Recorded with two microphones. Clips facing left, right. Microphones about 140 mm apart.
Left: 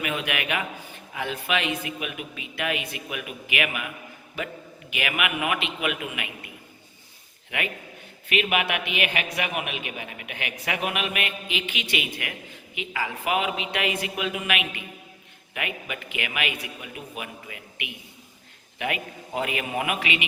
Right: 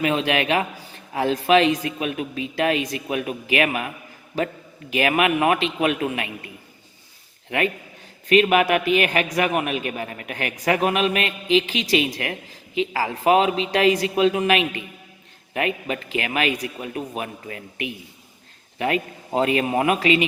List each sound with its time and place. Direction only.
0.0 s a man's voice: 30° right (ahead or behind)
8.3 s a man's voice: 40° right (ahead or behind)
19.3 s a man's voice: 30° right (ahead or behind)